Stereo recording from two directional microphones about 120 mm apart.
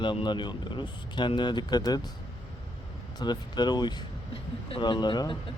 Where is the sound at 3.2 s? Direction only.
35° left (ahead or behind).